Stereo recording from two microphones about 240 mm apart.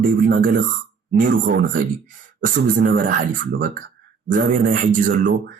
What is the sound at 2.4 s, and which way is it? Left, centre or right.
Speech, right.